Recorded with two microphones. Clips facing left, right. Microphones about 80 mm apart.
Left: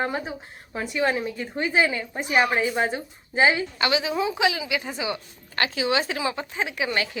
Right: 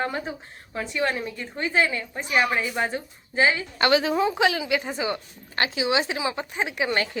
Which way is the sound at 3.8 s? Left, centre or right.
Right.